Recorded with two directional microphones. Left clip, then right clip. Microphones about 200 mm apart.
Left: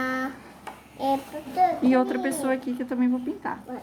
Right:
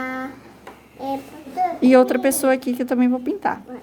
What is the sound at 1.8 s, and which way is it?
A woman's voice, 50° right (ahead or behind).